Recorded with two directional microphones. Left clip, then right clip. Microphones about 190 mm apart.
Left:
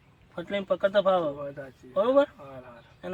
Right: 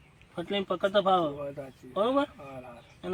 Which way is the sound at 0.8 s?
35° left (ahead or behind).